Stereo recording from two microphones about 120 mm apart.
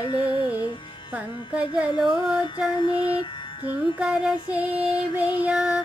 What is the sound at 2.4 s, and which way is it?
Music, 35° left (ahead or behind).